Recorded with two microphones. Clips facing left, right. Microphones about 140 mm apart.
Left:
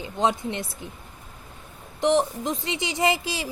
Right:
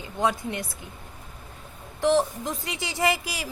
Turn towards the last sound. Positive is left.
turn(degrees=25)  # may be behind; listen again after turning